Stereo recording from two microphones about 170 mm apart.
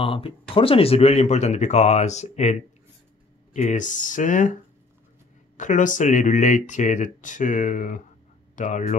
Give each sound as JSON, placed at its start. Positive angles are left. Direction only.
{"t": 0.0, "sound": "speech", "side_deg": 30}
{"t": 3.5, "sound": "speech", "side_deg": 45}
{"t": 5.6, "sound": "speech", "side_deg": 50}